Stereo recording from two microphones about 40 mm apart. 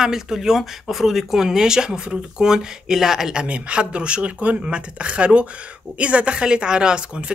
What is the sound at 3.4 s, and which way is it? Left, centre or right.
Speech, right.